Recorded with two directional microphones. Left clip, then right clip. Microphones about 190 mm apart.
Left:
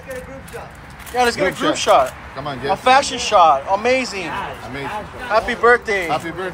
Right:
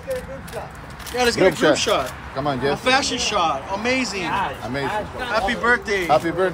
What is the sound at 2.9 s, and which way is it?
Speech, 10° right (ahead or behind).